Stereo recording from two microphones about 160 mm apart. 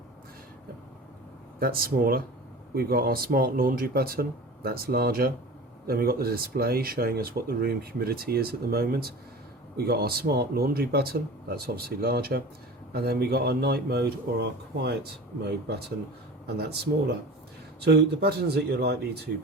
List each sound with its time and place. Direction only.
1.5 s speech: 65° right (ahead or behind); by 19.3 s 90° right